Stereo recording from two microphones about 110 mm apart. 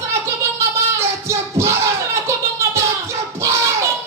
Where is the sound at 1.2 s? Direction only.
25° right (ahead or behind).